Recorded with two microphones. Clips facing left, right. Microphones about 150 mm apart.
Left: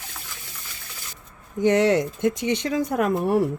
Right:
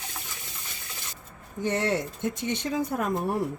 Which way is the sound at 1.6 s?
90° left.